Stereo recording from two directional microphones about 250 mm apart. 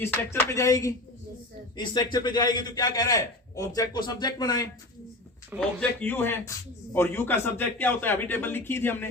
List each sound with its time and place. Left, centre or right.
0.0 s a man's voice: centre
5.5 s speech: centre
6.0 s a man's voice: centre